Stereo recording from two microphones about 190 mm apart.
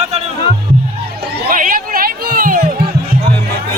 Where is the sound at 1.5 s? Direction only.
45° right (ahead or behind).